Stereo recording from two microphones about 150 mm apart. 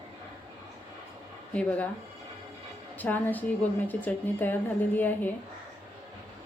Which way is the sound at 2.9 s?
10° left (ahead or behind).